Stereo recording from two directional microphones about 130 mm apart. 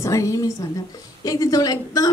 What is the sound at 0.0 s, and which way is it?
Speech, 25° left (ahead or behind).